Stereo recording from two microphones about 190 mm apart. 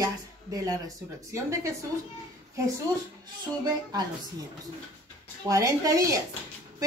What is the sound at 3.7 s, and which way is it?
Speech, 20° right (ahead or behind).